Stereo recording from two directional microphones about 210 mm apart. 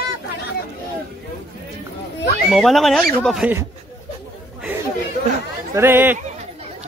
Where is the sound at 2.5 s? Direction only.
Centre (ahead or behind).